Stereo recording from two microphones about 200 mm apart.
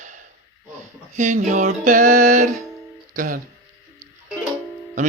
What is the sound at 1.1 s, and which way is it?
Music, 40° right (ahead or behind).